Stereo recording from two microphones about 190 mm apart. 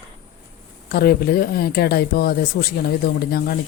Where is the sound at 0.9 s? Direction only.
55° left (ahead or behind).